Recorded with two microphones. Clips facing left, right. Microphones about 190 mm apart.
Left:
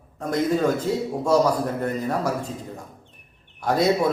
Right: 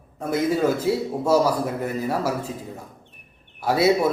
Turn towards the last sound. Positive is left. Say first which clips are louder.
# right 1 dB
turn(degrees=-5)  # may be behind; listen again after turning